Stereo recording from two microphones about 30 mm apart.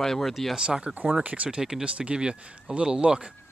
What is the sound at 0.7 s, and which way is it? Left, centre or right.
Speech, right.